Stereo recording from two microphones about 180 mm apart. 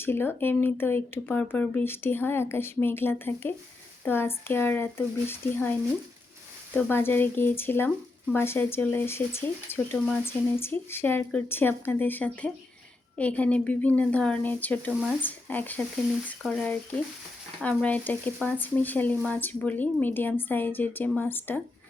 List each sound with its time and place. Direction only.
0.0 s speech: 10° left (ahead or behind)
6.7 s speech: 10° left (ahead or behind)